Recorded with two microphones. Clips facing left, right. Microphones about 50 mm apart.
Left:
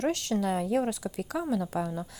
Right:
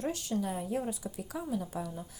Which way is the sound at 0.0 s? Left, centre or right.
Left.